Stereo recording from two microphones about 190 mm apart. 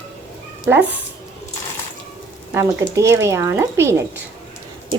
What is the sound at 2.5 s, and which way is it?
Speech, 15° right (ahead or behind).